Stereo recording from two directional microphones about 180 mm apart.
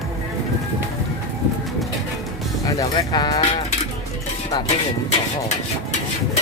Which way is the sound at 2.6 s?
20° left (ahead or behind).